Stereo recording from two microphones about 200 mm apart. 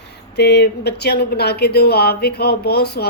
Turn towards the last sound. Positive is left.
turn(degrees=55)  # may be behind; listen again after turning